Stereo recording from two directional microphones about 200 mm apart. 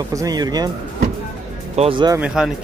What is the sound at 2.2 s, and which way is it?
Speech, 5° right (ahead or behind).